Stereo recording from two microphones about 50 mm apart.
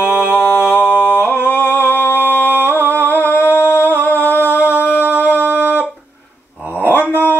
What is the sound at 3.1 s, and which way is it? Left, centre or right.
Humming, left.